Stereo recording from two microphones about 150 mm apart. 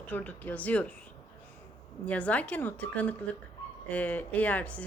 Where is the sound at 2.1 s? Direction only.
10° left (ahead or behind).